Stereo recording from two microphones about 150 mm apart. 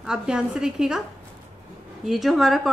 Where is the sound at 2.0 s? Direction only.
Centre (ahead or behind).